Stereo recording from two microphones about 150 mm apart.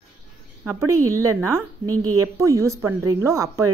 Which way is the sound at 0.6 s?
15° right (ahead or behind).